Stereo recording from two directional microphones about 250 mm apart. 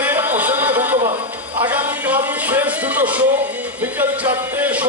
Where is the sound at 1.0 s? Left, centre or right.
Right.